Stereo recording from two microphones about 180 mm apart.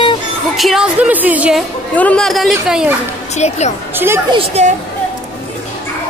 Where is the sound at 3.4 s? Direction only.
40° left (ahead or behind).